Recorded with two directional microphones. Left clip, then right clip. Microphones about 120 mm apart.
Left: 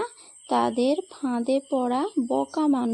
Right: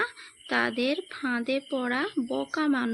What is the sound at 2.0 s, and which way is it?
Speech, 5° right (ahead or behind).